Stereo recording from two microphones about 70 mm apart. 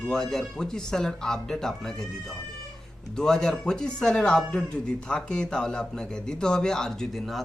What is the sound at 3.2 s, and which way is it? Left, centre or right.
A man's voice, centre.